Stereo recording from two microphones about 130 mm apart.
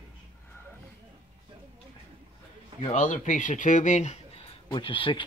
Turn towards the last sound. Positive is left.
turn(degrees=40)  # may be behind; listen again after turning